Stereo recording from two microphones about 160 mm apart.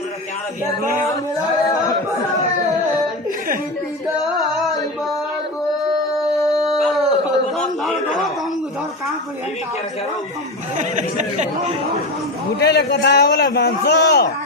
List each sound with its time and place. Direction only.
1.1 s a sound: 20° left (ahead or behind)
4.2 s male singing: centre (ahead or behind)
6.4 s howl: centre (ahead or behind)
10.8 s speech: 50° right (ahead or behind)
12.5 s a man's voice: 90° left